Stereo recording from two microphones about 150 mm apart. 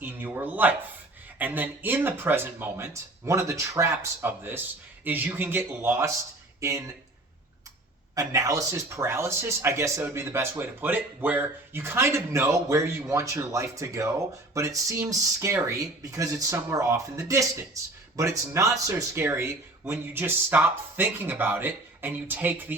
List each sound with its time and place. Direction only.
0.0 s speech: 15° right (ahead or behind)
8.1 s speech: 25° right (ahead or behind)